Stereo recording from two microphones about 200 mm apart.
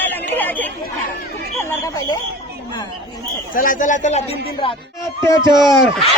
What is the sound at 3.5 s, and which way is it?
Speech, 40° left (ahead or behind).